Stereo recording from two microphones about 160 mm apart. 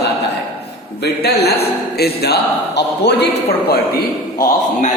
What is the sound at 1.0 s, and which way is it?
A man's voice, 90° left.